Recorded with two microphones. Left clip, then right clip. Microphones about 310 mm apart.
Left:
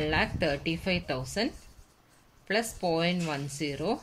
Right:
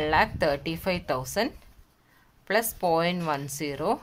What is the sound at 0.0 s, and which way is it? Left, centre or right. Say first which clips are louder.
Speech: right 5 dB; centre.